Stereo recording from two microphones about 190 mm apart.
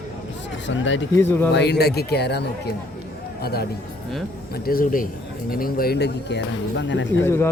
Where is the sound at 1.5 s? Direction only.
65° left (ahead or behind).